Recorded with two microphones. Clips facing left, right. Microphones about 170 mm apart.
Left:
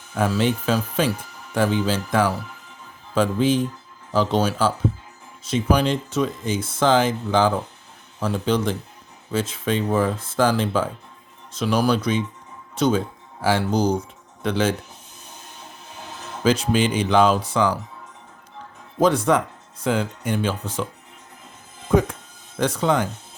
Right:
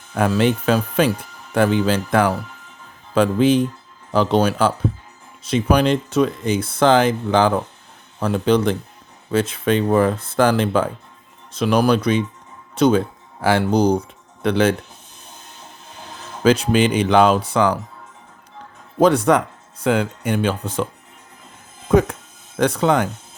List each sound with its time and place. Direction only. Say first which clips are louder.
0.1 s speech: right 4 dB; 60° right (ahead or behind)
16.4 s speech: right 4 dB; 65° right (ahead or behind)
18.9 s speech: right 4 dB; 65° right (ahead or behind)
21.8 s speech: right 3 dB; 65° right (ahead or behind)